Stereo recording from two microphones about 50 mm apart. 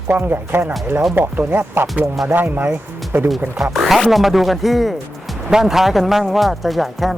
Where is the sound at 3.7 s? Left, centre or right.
Centre.